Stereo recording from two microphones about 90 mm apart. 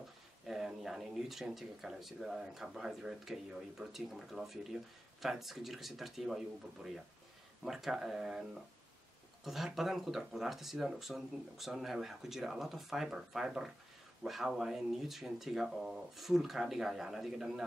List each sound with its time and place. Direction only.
0.5 s speech: 5° right (ahead or behind)